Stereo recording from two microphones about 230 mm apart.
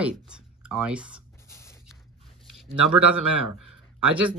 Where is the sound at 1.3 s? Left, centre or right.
Centre.